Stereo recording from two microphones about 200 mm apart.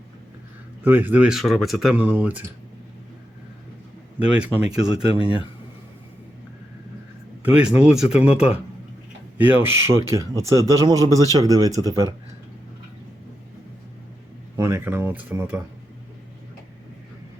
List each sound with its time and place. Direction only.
0.9 s speech: 10° right (ahead or behind)
4.3 s speech: 5° right (ahead or behind)
5.1 s speech: 25° left (ahead or behind)
7.4 s speech: 5° right (ahead or behind)
14.5 s speech: 15° right (ahead or behind)